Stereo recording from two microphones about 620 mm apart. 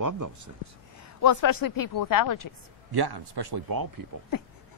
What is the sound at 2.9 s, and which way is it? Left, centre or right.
Speech, right.